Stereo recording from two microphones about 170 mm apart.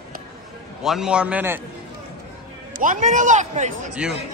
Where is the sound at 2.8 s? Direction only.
50° right (ahead or behind).